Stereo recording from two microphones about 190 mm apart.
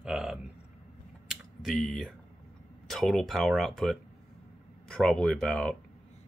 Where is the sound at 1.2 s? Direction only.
Centre (ahead or behind).